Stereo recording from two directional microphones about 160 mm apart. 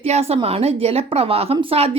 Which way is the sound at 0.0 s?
40° right (ahead or behind).